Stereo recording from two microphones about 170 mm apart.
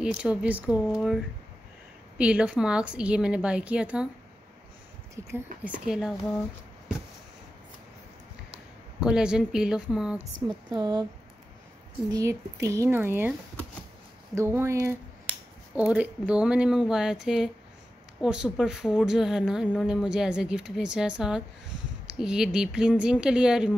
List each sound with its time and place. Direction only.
0.0 s speech: 5° right (ahead or behind)
5.2 s speech: 15° right (ahead or behind)
5.9 s speech: 5° right (ahead or behind)
9.0 s speech: 5° right (ahead or behind)
10.7 s speech: 25° right (ahead or behind)
12.1 s speech: 20° right (ahead or behind)
14.3 s speech: 15° right (ahead or behind)